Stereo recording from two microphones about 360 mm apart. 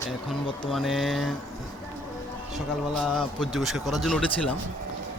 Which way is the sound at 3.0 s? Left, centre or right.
Centre.